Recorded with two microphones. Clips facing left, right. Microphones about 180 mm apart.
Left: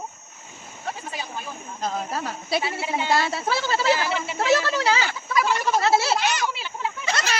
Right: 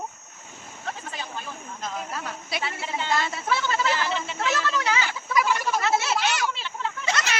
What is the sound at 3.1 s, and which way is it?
Speech, 35° left (ahead or behind).